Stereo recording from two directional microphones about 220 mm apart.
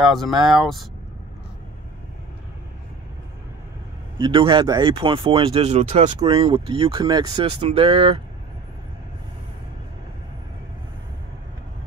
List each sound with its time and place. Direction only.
0.0 s speech: centre (ahead or behind)
4.2 s speech: 20° right (ahead or behind)